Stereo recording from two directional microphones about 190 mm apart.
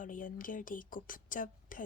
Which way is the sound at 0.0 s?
45° left (ahead or behind).